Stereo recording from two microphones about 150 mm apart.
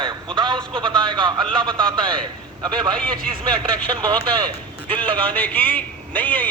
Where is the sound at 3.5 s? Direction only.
30° right (ahead or behind).